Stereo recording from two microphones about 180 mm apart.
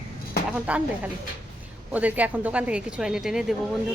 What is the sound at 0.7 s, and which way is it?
Speech, 10° right (ahead or behind).